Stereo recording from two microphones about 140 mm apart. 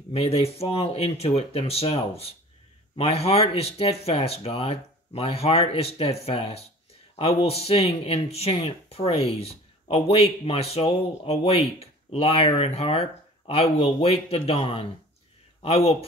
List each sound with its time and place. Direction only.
0.1 s speech: 45° left (ahead or behind)